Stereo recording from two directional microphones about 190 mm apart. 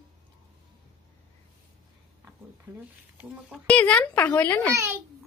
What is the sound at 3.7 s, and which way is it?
A child's voice, 5° left (ahead or behind).